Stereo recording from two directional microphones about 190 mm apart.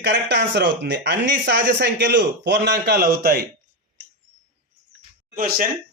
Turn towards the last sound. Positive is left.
turn(degrees=-45)  # may be behind; listen again after turning